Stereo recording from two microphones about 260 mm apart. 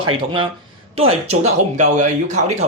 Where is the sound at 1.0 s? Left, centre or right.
Right.